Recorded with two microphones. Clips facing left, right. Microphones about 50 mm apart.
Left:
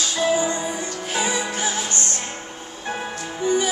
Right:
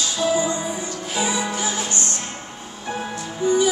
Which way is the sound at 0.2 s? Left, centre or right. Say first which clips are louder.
Even; left.